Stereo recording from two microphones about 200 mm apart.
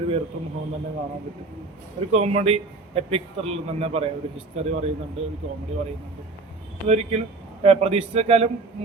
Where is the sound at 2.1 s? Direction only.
30° right (ahead or behind).